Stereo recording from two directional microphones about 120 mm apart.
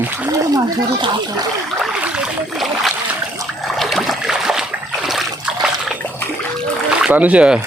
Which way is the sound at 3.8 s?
Centre (ahead or behind).